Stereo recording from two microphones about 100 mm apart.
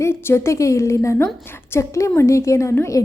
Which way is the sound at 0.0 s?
25° left (ahead or behind).